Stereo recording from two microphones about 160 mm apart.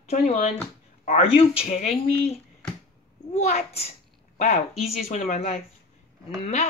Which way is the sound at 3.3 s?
45° left (ahead or behind).